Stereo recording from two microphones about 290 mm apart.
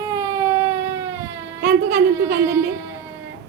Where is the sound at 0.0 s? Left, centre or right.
Centre.